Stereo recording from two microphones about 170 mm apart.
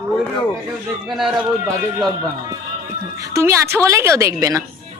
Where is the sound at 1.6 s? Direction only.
20° right (ahead or behind).